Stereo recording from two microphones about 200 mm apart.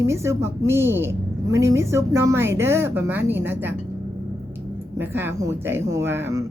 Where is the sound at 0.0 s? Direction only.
15° right (ahead or behind).